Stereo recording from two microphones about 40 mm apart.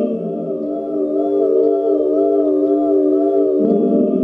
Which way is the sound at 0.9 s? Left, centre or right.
Centre.